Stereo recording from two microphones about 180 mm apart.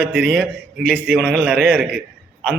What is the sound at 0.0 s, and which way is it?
Speech, 65° right (ahead or behind).